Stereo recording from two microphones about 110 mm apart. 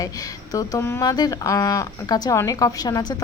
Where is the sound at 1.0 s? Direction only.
35° left (ahead or behind).